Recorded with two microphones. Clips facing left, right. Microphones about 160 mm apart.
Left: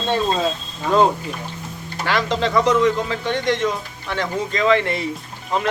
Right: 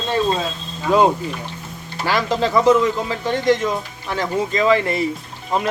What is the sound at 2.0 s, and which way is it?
Speech, 5° right (ahead or behind).